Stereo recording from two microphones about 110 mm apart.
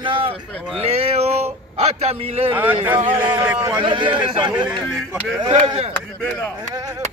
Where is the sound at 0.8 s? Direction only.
70° right (ahead or behind).